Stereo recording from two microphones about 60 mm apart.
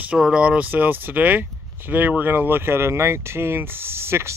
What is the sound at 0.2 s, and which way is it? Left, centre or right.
Speech, centre.